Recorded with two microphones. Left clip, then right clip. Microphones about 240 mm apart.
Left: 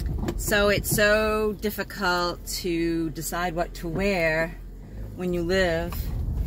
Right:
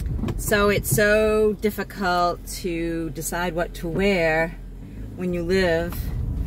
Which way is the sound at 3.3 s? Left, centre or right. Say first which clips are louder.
Right 2 dB; centre.